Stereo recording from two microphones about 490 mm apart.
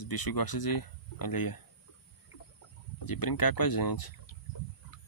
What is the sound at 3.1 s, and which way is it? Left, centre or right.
Speech, left.